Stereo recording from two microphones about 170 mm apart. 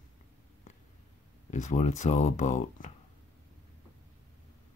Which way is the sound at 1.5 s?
45° left (ahead or behind).